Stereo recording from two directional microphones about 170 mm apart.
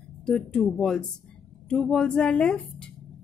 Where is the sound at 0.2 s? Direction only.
5° left (ahead or behind).